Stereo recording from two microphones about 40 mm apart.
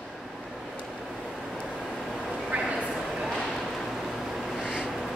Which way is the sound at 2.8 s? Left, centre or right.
Centre.